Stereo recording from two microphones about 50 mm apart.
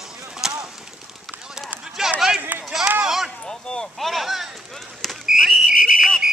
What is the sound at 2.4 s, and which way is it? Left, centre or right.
Run, right.